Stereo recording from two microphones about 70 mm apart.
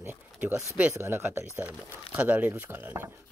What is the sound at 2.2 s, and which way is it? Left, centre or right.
Chopping, right.